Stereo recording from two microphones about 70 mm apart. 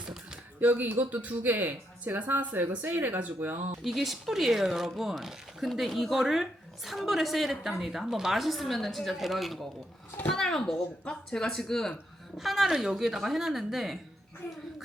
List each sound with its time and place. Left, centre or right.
0.0 s a sound: centre
0.6 s speech: right
3.8 s speech: centre